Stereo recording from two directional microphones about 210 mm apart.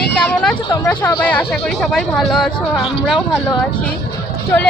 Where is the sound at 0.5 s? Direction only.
20° left (ahead or behind).